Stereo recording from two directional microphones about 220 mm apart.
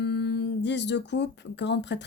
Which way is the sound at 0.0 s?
50° left (ahead or behind).